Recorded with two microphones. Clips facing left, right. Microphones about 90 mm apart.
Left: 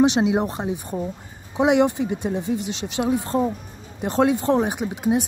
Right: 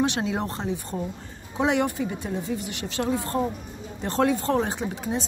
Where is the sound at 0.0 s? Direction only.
20° left (ahead or behind).